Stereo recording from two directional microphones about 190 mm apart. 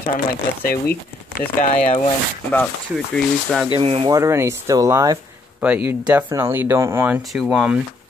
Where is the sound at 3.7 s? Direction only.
30° right (ahead or behind).